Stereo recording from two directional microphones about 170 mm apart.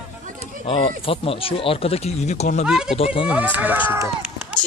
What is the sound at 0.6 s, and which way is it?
Speech, 35° left (ahead or behind).